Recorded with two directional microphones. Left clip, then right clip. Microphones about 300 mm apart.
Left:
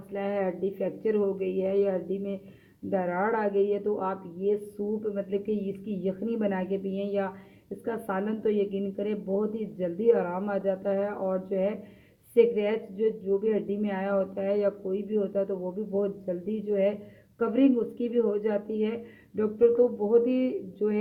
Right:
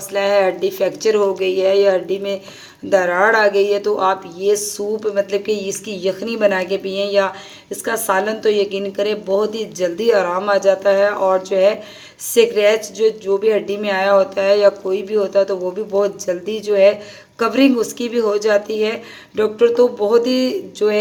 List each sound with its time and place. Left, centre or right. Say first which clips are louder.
0.1 s speech: right 15 dB; centre